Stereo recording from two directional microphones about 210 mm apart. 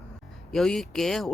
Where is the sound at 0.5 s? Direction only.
Centre (ahead or behind).